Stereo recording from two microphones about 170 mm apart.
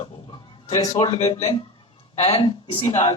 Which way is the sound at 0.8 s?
25° left (ahead or behind).